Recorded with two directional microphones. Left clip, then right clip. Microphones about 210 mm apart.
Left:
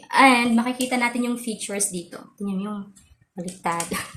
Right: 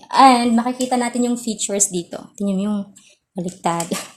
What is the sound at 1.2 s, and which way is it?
A woman's voice, 45° right (ahead or behind).